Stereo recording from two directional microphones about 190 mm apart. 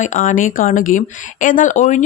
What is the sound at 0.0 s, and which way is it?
Speech, 40° left (ahead or behind).